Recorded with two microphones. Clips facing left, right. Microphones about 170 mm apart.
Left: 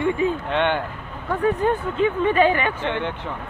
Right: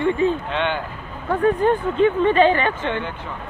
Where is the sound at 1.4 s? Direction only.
10° left (ahead or behind).